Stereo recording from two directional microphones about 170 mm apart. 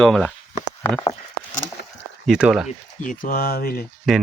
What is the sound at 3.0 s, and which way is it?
Speech, 55° left (ahead or behind).